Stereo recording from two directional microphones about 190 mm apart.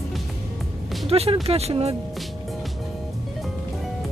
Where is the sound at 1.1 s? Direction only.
30° right (ahead or behind).